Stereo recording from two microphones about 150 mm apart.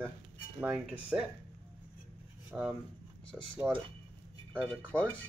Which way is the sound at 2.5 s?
5° right (ahead or behind).